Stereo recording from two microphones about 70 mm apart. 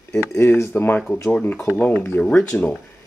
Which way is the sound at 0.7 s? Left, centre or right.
Left.